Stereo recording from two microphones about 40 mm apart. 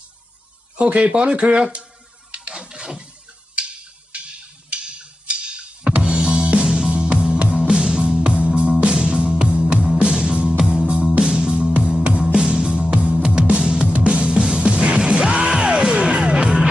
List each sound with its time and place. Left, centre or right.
0.9 s speech: right
2.5 s a sound: centre
3.5 s tick-tock: right
6.1 s music: centre; by 14.1 s right
14.1 s music: centre
14.6 s music: centre